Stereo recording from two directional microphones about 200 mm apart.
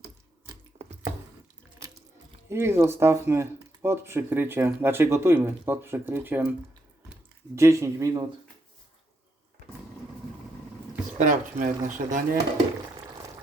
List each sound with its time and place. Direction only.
2.5 s speech: 10° right (ahead or behind)
7.5 s speech: 15° right (ahead or behind)
11.2 s speech: 40° right (ahead or behind)